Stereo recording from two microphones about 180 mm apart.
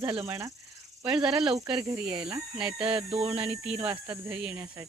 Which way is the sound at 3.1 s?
35° right (ahead or behind).